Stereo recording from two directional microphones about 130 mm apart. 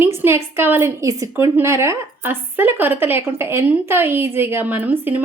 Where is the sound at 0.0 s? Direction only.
20° right (ahead or behind).